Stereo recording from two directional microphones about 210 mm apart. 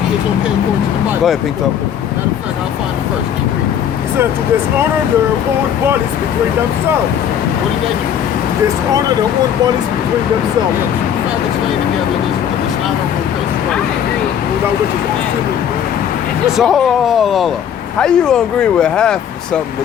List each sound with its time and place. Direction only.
8.6 s speech: 15° right (ahead or behind)
16.6 s speech: centre (ahead or behind)